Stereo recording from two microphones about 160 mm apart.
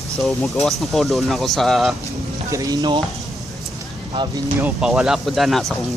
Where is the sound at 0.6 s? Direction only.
Centre (ahead or behind).